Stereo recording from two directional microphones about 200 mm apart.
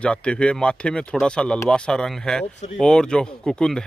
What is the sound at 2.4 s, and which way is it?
Speech, 35° left (ahead or behind).